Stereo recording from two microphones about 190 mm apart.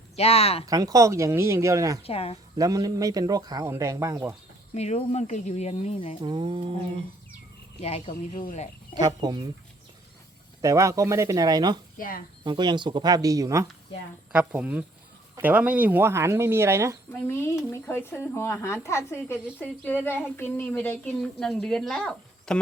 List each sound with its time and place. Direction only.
0.2 s speech: 30° left (ahead or behind)
0.6 s speech: 20° right (ahead or behind)
2.0 s speech: 30° left (ahead or behind)
2.6 s speech: 20° right (ahead or behind)
4.7 s speech: 35° left (ahead or behind)
6.2 s speech: 25° right (ahead or behind)
7.8 s speech: 30° left (ahead or behind)
9.0 s speech: 20° right (ahead or behind)
10.6 s speech: 15° right (ahead or behind)
11.9 s speech: 50° left (ahead or behind)
12.5 s speech: 25° right (ahead or behind)
17.1 s speech: 10° left (ahead or behind)